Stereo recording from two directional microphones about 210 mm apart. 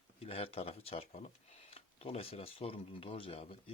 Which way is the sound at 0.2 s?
30° left (ahead or behind).